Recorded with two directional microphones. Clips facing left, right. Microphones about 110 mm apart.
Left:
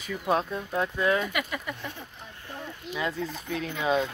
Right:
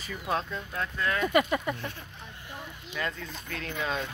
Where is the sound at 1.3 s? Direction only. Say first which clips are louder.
Right 7 dB; 35° right (ahead or behind).